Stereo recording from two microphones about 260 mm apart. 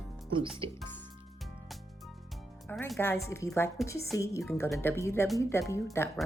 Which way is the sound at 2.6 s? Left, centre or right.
Centre.